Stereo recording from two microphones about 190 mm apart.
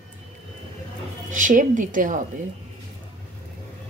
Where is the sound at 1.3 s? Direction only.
45° right (ahead or behind).